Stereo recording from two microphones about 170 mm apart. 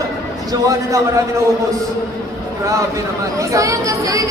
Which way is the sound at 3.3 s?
20° right (ahead or behind).